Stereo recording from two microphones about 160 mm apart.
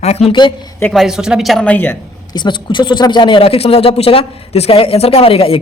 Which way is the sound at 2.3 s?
30° left (ahead or behind).